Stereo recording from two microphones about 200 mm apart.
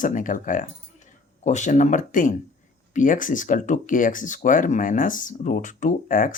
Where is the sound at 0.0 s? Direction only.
40° left (ahead or behind).